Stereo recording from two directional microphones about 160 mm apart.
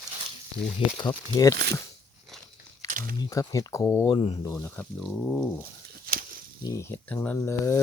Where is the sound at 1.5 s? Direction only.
90° right.